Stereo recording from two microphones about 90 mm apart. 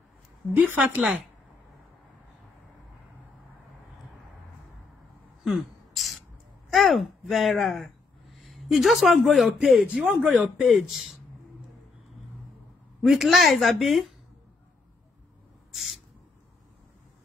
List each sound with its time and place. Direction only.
0.7 s a woman's voice: 15° right (ahead or behind)
5.4 s a sound: centre (ahead or behind)
6.7 s a man's voice: centre (ahead or behind)
13.0 s a woman's voice: 5° right (ahead or behind)
15.7 s owl: centre (ahead or behind)